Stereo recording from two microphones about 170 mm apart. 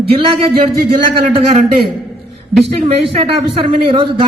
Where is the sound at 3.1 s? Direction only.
35° right (ahead or behind).